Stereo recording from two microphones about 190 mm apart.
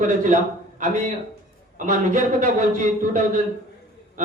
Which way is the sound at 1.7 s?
40° right (ahead or behind).